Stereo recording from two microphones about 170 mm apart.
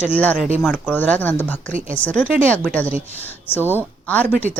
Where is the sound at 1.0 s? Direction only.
10° left (ahead or behind).